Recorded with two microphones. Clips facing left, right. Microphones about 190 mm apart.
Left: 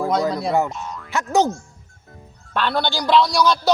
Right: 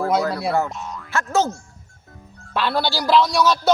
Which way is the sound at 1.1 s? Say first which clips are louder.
Left 2 dB; 15° left (ahead or behind).